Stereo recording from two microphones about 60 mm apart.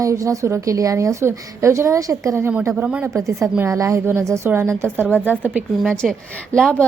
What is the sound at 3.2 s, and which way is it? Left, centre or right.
Speech, right.